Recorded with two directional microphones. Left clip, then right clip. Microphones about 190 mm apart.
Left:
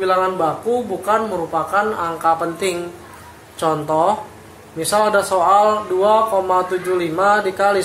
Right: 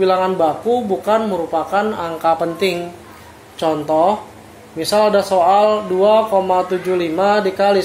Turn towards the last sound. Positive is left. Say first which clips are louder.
# right 2 dB
turn(degrees=-30)  # may be behind; listen again after turning